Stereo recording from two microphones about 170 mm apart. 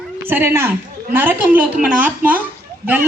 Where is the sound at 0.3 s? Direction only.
15° right (ahead or behind).